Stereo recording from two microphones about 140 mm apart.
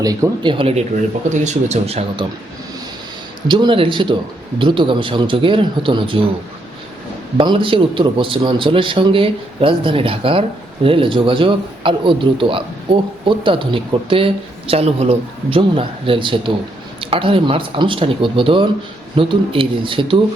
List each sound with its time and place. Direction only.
0.0 s speech: 25° right (ahead or behind)
0.5 s a man's voice: 40° right (ahead or behind)
1.3 s speech: 55° right (ahead or behind)
3.5 s a man's voice: 35° right (ahead or behind)
7.3 s a man's voice: 40° right (ahead or behind)